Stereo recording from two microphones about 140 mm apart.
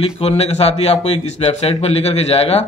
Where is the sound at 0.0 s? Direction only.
50° left (ahead or behind).